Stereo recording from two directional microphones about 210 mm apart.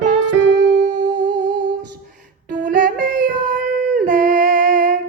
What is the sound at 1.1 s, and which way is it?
Music, 20° right (ahead or behind).